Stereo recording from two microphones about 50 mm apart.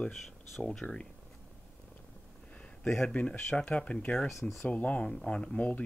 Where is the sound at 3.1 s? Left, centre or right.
Left.